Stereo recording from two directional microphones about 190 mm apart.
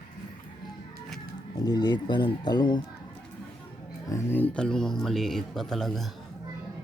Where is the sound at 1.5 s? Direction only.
20° left (ahead or behind).